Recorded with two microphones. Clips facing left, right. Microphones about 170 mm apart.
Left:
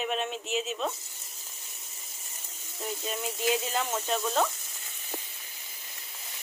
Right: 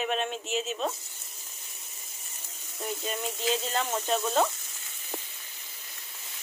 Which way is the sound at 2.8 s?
Centre (ahead or behind).